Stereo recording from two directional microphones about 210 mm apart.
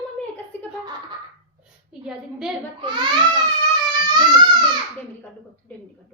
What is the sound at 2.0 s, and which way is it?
Speech, centre (ahead or behind).